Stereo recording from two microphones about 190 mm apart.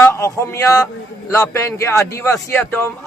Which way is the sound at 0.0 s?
15° left (ahead or behind).